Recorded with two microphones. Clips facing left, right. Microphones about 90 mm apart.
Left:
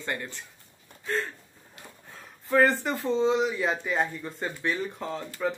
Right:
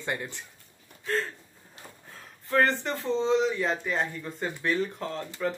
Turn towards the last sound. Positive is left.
turn(degrees=5)  # may be behind; listen again after turning